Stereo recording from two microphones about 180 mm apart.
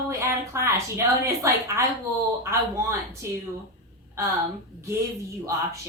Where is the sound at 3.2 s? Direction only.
15° right (ahead or behind).